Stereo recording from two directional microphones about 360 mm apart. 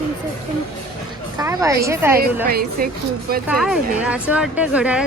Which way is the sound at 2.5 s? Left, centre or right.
Right.